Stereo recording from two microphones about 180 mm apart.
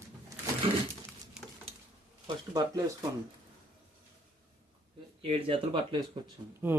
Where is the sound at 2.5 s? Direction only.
20° right (ahead or behind).